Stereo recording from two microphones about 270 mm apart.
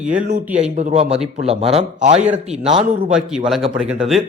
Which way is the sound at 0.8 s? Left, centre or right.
Right.